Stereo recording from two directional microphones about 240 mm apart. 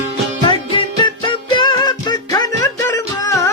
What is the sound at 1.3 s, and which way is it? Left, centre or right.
Music, centre.